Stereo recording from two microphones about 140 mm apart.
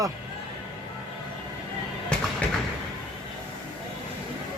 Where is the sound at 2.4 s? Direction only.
10° left (ahead or behind).